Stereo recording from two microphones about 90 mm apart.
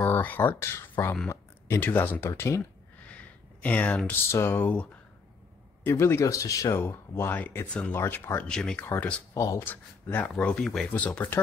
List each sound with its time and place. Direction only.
0.0 s speech: 25° left (ahead or behind)
3.1 s a sound: 15° left (ahead or behind)
4.1 s speech: 30° left (ahead or behind)
5.9 s speech: 25° left (ahead or behind)
6.8 s speech: 25° left (ahead or behind)
7.9 s speech: 25° left (ahead or behind)
8.5 s speech: 10° left (ahead or behind)
8.8 s speech: 20° left (ahead or behind)
9.3 s speech: 40° left (ahead or behind)
10.1 s speech: 15° left (ahead or behind)